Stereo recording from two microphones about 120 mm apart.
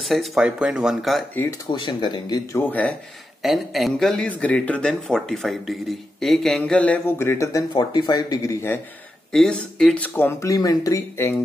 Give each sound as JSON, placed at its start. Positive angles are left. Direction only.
{"t": 0.0, "sound": "speech", "side_deg": 0}
{"t": 1.7, "sound": "speech", "side_deg": 40}
{"t": 2.5, "sound": "speech", "side_deg": 15}
{"t": 3.4, "sound": "speech", "side_deg": 0}
{"t": 7.7, "sound": "speech", "side_deg": 35}
{"t": 9.3, "sound": "speech", "side_deg": 5}